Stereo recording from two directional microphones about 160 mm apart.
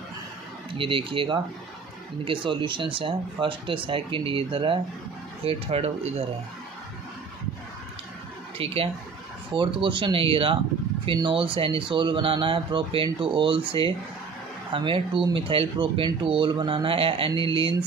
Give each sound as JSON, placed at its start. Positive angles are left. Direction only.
{"t": 0.7, "sound": "speech", "side_deg": -35}
{"t": 8.5, "sound": "speech", "side_deg": -35}